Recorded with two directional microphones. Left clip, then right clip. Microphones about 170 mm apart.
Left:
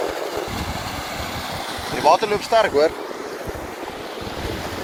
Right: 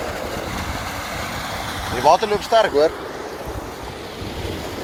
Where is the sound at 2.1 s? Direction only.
20° right (ahead or behind).